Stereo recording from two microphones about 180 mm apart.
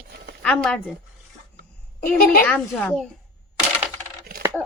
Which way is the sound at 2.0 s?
50° left (ahead or behind).